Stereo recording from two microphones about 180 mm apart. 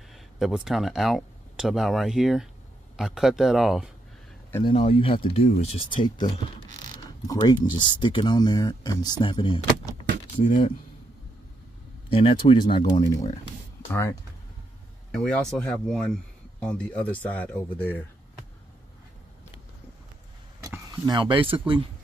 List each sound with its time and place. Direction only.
0.1 s speech: centre (ahead or behind)
4.6 s speech: 30° left (ahead or behind)
6.0 s speech: 25° left (ahead or behind)
12.1 s speech: 30° left (ahead or behind)
15.0 s speech: 5° left (ahead or behind)
20.9 s speech: 25° right (ahead or behind)